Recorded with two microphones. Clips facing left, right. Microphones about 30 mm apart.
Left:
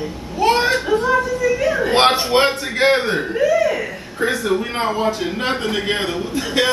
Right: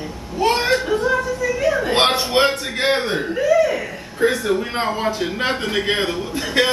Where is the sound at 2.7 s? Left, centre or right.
Left.